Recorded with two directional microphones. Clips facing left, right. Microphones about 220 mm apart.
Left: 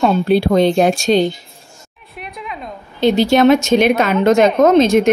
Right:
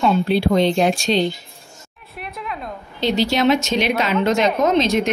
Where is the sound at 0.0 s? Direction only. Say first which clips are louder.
Left 4 dB; 45° left (ahead or behind).